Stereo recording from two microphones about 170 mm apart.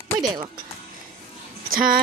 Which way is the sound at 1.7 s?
55° right (ahead or behind).